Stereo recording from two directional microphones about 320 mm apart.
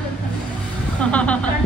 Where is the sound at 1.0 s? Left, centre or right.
Centre.